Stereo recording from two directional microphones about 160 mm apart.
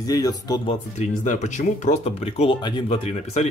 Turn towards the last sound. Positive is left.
turn(degrees=40)  # may be behind; listen again after turning